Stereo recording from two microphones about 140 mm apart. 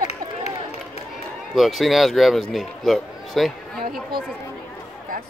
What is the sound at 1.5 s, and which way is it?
Speech, centre (ahead or behind).